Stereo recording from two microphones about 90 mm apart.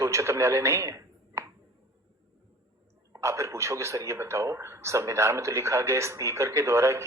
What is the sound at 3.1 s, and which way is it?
Speech, 35° right (ahead or behind).